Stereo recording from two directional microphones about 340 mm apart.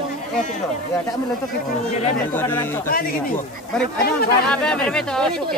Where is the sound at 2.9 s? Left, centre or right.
Left.